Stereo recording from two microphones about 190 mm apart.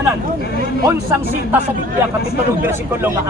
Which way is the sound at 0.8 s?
15° right (ahead or behind).